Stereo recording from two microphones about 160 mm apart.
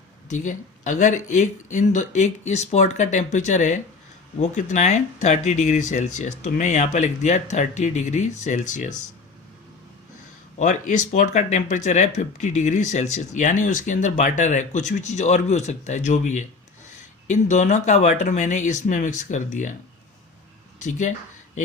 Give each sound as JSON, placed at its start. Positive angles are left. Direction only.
{"t": 0.3, "sound": "speech", "side_deg": 50}
{"t": 10.6, "sound": "speech", "side_deg": 50}
{"t": 20.7, "sound": "speech", "side_deg": 50}